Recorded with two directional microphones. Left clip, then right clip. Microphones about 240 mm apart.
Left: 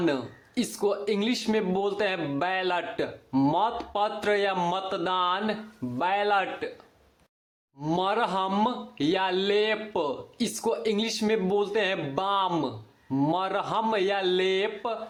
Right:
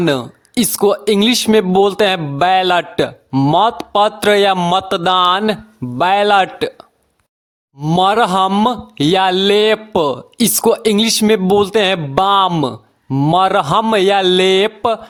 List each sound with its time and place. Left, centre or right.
0.0 s speech: right
7.8 s speech: right